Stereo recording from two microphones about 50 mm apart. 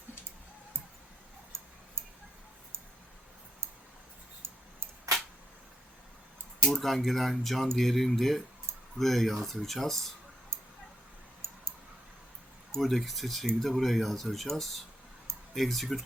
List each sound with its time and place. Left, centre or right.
4.4 s a sound: right
6.7 s speech: centre
12.7 s speech: centre